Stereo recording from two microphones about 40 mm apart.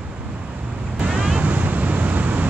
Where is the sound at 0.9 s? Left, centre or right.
Right.